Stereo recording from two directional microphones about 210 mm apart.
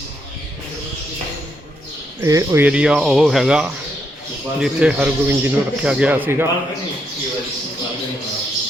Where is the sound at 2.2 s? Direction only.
15° right (ahead or behind).